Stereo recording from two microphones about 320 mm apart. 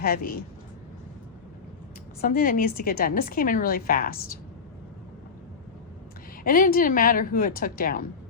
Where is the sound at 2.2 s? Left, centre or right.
Left.